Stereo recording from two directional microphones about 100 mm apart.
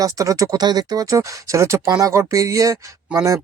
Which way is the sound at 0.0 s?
35° right (ahead or behind).